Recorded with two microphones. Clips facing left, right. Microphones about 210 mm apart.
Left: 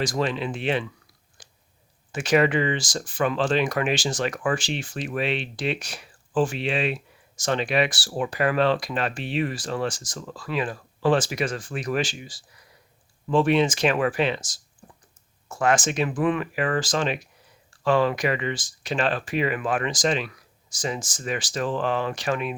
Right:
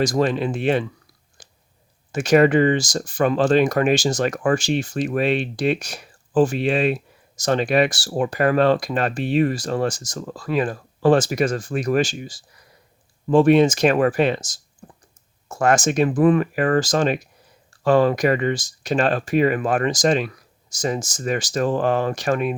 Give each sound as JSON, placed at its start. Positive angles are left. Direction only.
{"t": 0.0, "sound": "speech", "side_deg": -45}
{"t": 1.4, "sound": "a sound", "side_deg": -45}
{"t": 2.1, "sound": "speech", "side_deg": -45}